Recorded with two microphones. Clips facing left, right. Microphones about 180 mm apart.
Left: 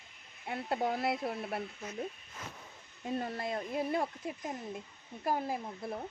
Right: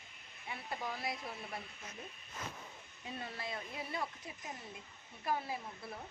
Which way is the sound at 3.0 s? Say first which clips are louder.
Left 9 dB; 45° left (ahead or behind).